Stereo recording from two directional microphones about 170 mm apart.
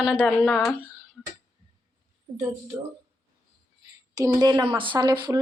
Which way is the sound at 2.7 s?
10° right (ahead or behind).